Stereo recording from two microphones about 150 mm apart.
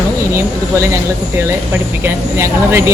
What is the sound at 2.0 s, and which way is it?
Speech, 20° right (ahead or behind).